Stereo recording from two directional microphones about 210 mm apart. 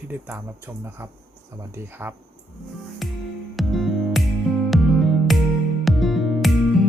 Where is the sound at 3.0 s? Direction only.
Centre (ahead or behind).